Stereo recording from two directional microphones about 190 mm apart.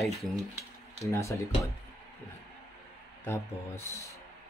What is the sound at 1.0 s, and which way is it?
Speech, 15° left (ahead or behind).